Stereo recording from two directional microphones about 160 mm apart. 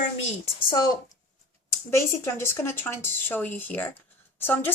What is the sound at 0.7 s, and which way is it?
A woman's voice, 25° left (ahead or behind).